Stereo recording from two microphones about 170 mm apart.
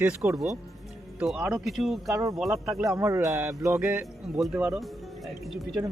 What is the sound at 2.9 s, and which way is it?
A man's voice, 15° right (ahead or behind).